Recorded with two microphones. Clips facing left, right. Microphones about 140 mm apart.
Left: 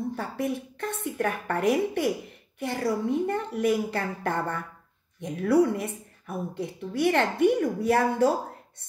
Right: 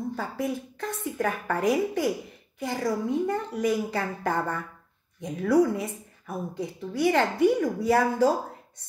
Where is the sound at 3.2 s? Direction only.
60° left (ahead or behind).